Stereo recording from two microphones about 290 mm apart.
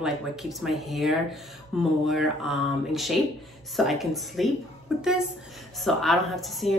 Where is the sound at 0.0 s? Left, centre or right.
Centre.